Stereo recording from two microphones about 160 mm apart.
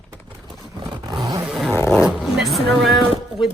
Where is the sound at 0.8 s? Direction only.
25° right (ahead or behind).